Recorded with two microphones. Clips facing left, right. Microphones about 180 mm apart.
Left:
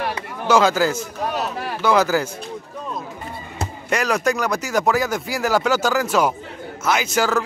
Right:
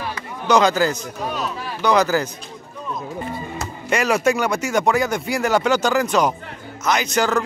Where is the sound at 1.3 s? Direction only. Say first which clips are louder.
Left 2 dB; 60° left (ahead or behind).